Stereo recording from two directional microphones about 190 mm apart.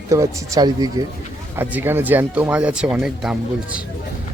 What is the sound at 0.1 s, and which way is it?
Speech, 15° right (ahead or behind).